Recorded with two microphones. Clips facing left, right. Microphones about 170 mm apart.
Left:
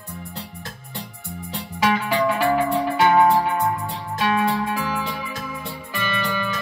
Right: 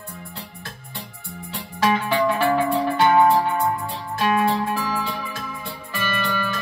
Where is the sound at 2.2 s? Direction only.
5° left (ahead or behind).